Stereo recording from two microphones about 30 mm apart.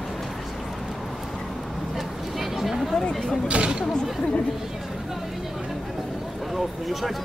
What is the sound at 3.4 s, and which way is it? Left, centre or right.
Chatter, right.